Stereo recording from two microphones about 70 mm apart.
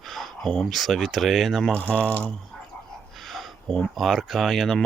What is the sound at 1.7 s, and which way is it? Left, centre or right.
Speech, centre.